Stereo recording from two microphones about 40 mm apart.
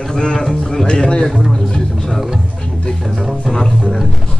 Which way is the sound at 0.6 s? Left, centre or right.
Centre.